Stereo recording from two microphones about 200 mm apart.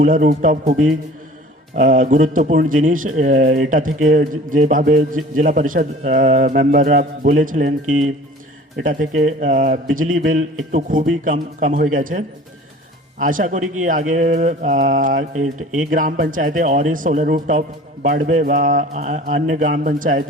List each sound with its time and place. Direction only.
0.0 s a man's voice: 40° right (ahead or behind)
8.8 s a man's voice: 40° right (ahead or behind)